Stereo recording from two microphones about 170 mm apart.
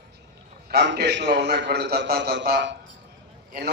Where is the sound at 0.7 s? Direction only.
80° right.